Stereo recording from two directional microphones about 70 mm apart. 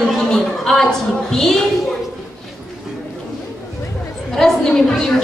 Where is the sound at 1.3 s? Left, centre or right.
Centre.